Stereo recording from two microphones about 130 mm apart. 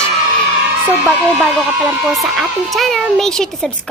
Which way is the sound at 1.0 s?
Centre (ahead or behind).